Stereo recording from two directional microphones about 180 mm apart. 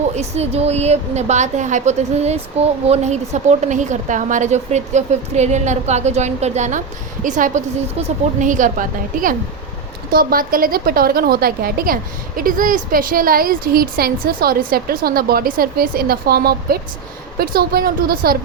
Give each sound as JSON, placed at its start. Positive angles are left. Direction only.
{"t": 0.2, "sound": "a woman's voice", "side_deg": -35}